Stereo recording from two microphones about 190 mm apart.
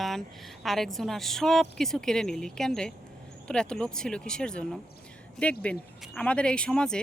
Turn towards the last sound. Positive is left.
turn(degrees=5)  # may be behind; listen again after turning